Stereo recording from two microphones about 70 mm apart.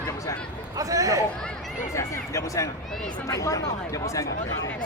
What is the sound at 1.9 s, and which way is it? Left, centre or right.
Music, left.